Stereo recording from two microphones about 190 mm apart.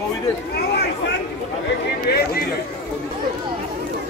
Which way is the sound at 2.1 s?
60° left (ahead or behind).